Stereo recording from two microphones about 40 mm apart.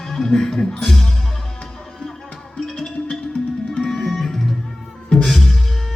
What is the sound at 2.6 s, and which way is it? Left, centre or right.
Music, centre.